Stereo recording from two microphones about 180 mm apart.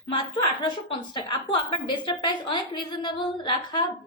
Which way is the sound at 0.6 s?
25° left (ahead or behind).